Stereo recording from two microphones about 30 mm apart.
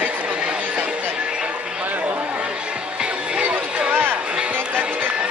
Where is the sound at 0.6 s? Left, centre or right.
Right.